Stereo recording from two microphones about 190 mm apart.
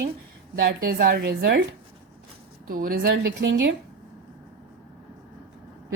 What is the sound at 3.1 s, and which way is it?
Speech, 75° right (ahead or behind).